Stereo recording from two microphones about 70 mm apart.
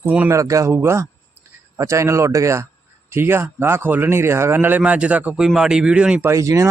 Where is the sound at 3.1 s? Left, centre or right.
Right.